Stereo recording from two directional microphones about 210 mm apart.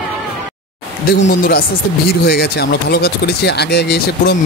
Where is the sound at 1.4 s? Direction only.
45° left (ahead or behind).